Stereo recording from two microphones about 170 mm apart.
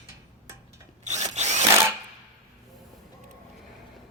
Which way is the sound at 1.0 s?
45° right (ahead or behind).